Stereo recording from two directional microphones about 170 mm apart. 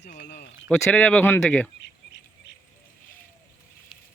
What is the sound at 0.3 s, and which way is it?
Speech, 75° left (ahead or behind).